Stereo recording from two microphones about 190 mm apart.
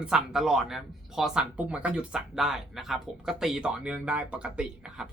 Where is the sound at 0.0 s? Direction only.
5° right (ahead or behind).